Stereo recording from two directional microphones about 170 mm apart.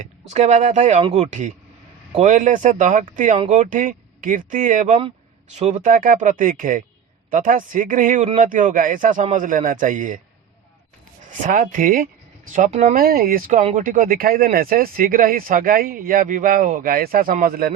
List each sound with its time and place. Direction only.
0.0 s speech: 45° right (ahead or behind)
11.3 s speech: 50° right (ahead or behind)
13.0 s speech: 60° right (ahead or behind)
13.6 s speech: 45° right (ahead or behind)